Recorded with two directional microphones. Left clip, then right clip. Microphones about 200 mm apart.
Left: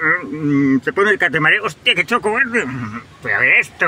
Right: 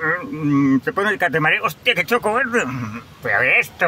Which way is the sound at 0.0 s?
10° right (ahead or behind).